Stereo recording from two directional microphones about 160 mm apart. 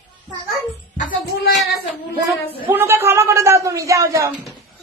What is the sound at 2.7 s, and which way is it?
A man's voice, 15° right (ahead or behind).